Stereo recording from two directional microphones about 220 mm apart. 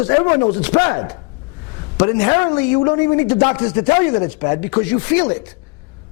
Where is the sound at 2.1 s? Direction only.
25° left (ahead or behind).